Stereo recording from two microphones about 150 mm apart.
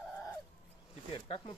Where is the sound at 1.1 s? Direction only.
35° left (ahead or behind).